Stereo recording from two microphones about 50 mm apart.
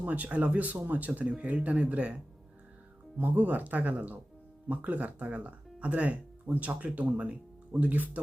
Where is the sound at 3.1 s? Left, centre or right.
Right.